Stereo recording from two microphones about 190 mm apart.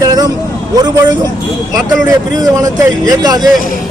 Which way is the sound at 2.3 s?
20° right (ahead or behind).